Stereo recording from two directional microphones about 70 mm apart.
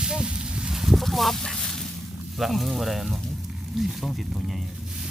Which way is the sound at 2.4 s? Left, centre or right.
Centre.